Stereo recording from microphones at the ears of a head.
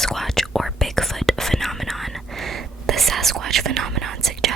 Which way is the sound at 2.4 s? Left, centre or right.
Right.